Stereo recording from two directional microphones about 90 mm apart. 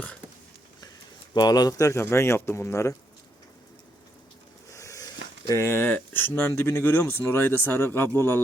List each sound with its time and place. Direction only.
1.3 s speech: 50° left (ahead or behind)
1.9 s speech: 30° left (ahead or behind)
4.7 s a sound: 35° left (ahead or behind)
5.5 s speech: 30° left (ahead or behind)